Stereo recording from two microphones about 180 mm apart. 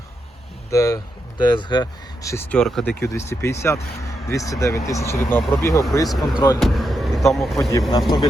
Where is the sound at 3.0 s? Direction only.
15° left (ahead or behind).